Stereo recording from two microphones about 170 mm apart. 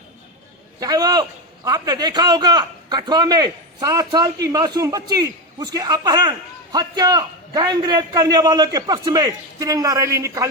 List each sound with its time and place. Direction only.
0.8 s a man's voice: 20° right (ahead or behind)